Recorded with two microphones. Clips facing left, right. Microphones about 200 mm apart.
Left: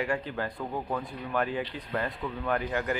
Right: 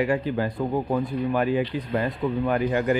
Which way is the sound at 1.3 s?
10° right (ahead or behind).